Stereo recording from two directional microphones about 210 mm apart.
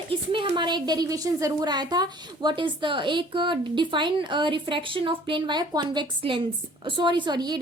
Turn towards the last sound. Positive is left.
turn(degrees=-20)  # may be behind; listen again after turning